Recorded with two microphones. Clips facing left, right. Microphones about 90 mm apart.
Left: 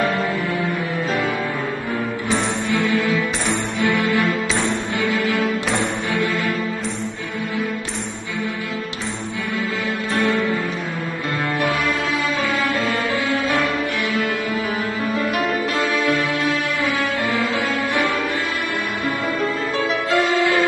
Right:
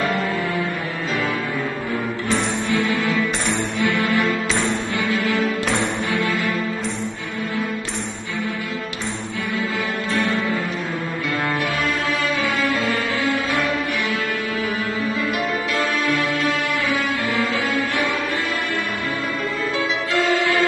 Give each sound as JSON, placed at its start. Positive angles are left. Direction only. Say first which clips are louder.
{"t": 3.8, "sound": "music", "louder": "left 1 dB", "side_deg": 20}
{"t": 20.1, "sound": "music", "louder": "left 2 dB", "side_deg": 20}